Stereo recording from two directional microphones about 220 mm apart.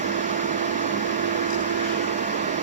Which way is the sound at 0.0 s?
35° right (ahead or behind).